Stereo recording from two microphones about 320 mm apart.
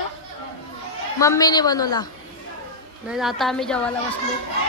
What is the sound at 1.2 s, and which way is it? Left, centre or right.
Speech, centre.